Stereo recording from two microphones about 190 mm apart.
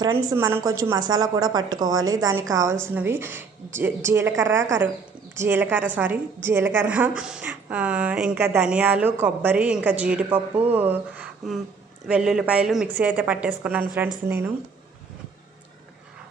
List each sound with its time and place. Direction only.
0.0 s a woman's voice: 15° right (ahead or behind)